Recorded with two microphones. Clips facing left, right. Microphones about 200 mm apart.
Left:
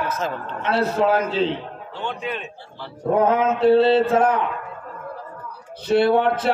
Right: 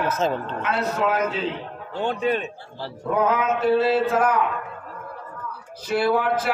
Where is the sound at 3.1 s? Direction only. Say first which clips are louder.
Left 3 dB; 30° left (ahead or behind).